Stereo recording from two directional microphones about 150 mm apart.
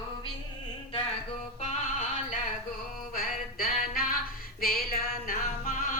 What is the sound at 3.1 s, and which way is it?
Music, 70° left (ahead or behind).